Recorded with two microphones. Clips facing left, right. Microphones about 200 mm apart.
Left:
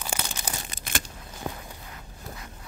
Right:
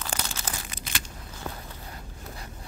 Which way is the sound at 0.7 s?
45° left (ahead or behind).